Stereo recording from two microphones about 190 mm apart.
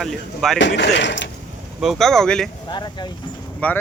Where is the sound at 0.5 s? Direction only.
70° left (ahead or behind).